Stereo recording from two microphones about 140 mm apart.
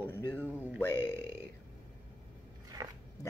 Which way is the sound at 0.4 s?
10° right (ahead or behind).